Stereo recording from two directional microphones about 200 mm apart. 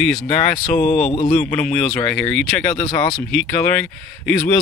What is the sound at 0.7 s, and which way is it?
Speech, 35° left (ahead or behind).